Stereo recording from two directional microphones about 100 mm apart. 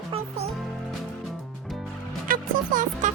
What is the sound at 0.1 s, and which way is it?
Music, 90° right.